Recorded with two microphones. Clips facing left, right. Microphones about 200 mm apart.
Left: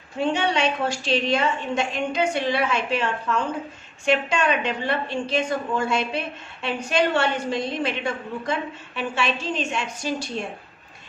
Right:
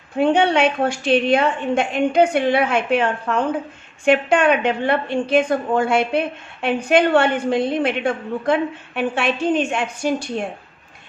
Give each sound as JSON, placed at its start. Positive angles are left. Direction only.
{"t": 0.2, "sound": "a woman's voice", "side_deg": -55}